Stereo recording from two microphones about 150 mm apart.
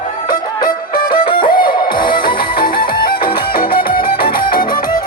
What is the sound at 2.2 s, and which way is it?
Music, 75° left (ahead or behind).